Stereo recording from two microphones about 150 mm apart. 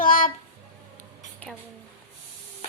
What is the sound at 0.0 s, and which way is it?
Music, 70° left (ahead or behind).